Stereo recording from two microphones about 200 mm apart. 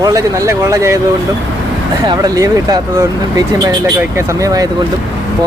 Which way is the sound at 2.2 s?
15° right (ahead or behind).